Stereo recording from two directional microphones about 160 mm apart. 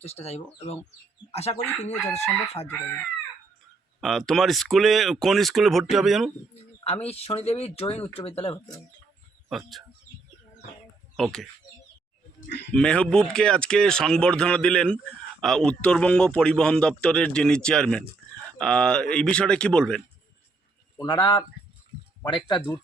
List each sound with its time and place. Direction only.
0.0 s speech: 40° left (ahead or behind)
4.0 s speech: centre (ahead or behind)
6.8 s speech: 40° left (ahead or behind)
9.5 s speech: centre (ahead or behind)
11.2 s speech: centre (ahead or behind)
12.5 s speech: 90° left
12.7 s speech: 5° left (ahead or behind)
21.0 s speech: 30° left (ahead or behind)